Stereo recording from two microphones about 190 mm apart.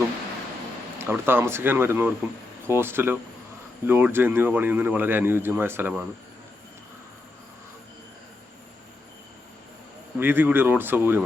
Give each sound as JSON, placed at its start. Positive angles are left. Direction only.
{"t": 0.9, "sound": "speech", "side_deg": -10}
{"t": 10.2, "sound": "speech", "side_deg": -10}